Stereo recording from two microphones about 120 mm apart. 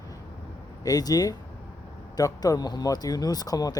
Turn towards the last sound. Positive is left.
turn(degrees=30)  # may be behind; listen again after turning